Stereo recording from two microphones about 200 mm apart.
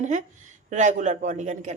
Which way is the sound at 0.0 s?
40° right (ahead or behind).